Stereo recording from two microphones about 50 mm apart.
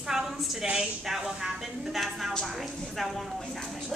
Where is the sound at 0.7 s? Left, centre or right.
Centre.